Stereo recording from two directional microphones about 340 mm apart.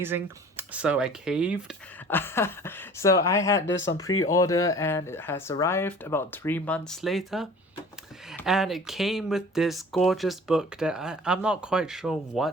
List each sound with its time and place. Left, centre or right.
0.0 s speech: centre
3.7 s speech: left
4.3 s speech: centre